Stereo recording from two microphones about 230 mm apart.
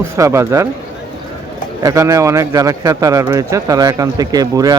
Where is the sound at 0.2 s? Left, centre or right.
Centre.